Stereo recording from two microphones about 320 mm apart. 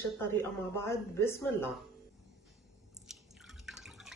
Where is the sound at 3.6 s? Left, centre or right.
Centre.